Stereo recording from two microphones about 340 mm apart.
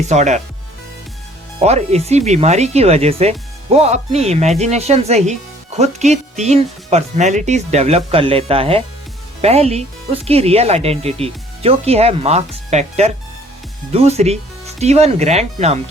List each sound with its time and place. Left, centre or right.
0.1 s speech: right
1.5 s speech: centre